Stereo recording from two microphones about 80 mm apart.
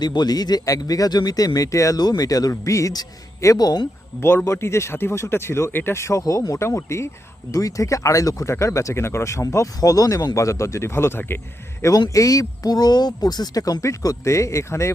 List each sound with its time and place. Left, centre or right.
0.0 s speech: left
2.0 s speech: left
4.2 s speech: left
11.8 s speech: left